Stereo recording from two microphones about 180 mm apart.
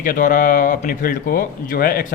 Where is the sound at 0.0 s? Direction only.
50° left (ahead or behind).